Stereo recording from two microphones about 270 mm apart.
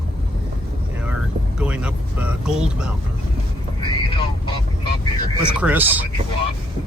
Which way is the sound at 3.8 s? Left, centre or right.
Centre.